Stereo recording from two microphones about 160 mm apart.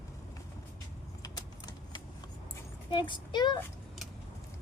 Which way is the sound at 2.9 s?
30° left (ahead or behind).